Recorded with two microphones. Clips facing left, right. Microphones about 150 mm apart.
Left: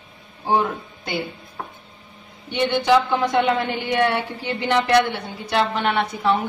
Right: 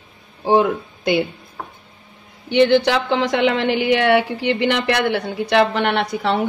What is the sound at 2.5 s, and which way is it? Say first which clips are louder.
A woman's voice: right 4 dB; 85° right.